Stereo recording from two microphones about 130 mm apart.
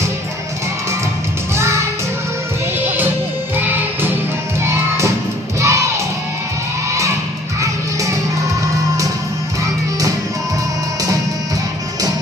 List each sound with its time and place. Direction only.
3.5 s music: 15° right (ahead or behind)
5.6 s crowd: 20° right (ahead or behind)